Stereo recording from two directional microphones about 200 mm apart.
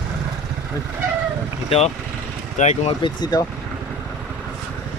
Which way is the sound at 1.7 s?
30° left (ahead or behind).